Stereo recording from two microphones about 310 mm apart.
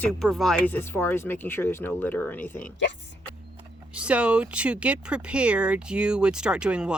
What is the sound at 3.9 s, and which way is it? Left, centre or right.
Speech, centre.